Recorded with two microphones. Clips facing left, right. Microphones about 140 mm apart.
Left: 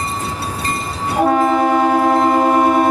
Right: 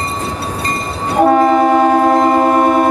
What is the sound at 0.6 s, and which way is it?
Train, 40° right (ahead or behind).